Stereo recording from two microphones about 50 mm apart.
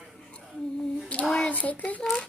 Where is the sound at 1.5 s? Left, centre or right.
Left.